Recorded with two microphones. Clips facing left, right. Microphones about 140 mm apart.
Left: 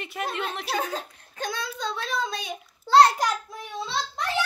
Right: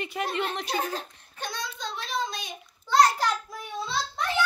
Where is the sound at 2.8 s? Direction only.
30° left (ahead or behind).